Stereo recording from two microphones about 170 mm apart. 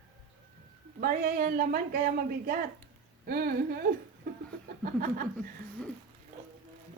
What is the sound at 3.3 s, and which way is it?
Speech, 65° right (ahead or behind).